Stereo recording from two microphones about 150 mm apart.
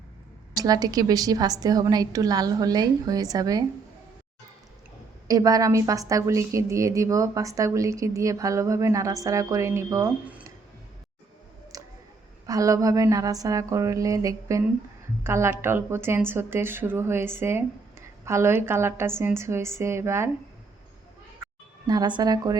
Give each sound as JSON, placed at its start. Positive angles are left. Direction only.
{"t": 0.5, "sound": "a woman's voice", "side_deg": -25}
{"t": 5.3, "sound": "a woman's voice", "side_deg": -25}
{"t": 10.2, "sound": "a sound", "side_deg": -10}
{"t": 11.7, "sound": "a sound", "side_deg": -25}
{"t": 12.5, "sound": "a woman's voice", "side_deg": -25}
{"t": 21.8, "sound": "a woman's voice", "side_deg": -30}